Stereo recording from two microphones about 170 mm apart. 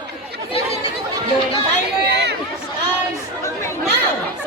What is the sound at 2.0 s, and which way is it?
Chatter, 80° right.